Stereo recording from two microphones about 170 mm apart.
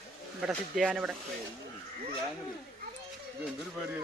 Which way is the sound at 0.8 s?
5° right (ahead or behind).